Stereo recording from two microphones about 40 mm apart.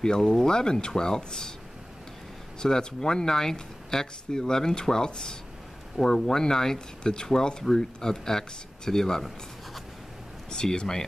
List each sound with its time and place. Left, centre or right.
0.0 s speech: centre
2.6 s speech: centre
10.5 s speech: centre